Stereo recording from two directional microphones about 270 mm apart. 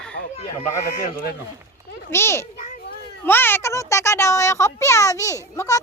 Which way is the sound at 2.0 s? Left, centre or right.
Centre.